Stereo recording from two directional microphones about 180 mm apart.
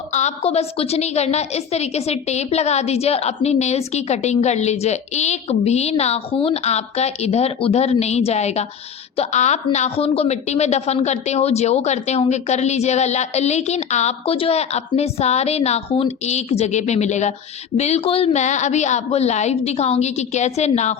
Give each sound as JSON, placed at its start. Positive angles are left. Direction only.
{"t": 0.1, "sound": "a woman's voice", "side_deg": 40}